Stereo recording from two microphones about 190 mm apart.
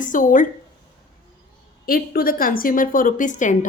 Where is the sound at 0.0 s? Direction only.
45° left (ahead or behind).